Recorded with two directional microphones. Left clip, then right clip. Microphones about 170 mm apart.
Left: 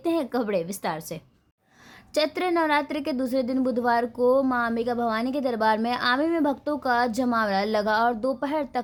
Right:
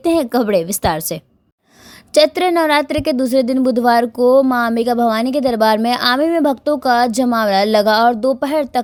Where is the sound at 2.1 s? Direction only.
35° right (ahead or behind).